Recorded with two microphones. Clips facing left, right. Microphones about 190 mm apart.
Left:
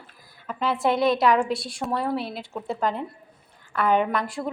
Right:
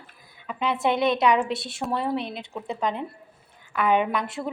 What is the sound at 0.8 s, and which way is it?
Speech, centre (ahead or behind).